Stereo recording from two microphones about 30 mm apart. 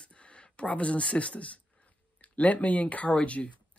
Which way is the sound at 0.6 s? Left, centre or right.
Left.